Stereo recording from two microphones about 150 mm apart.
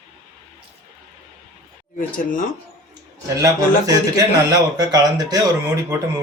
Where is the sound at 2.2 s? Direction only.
65° left (ahead or behind).